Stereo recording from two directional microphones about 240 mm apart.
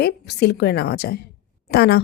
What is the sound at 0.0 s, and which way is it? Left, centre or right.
A woman's voice, left.